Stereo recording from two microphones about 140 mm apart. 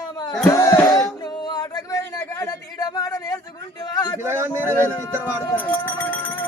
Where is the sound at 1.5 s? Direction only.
30° left (ahead or behind).